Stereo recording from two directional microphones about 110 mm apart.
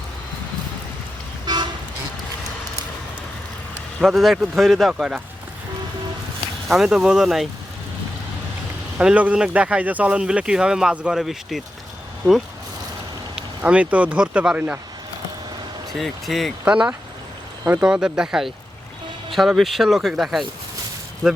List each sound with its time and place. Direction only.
4.0 s speech: centre (ahead or behind)
6.7 s speech: 5° right (ahead or behind)
9.0 s speech: 10° right (ahead or behind)
13.3 s speech: 10° right (ahead or behind)
16.0 s speech: centre (ahead or behind)